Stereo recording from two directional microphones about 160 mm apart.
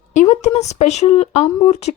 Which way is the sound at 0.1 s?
45° left (ahead or behind).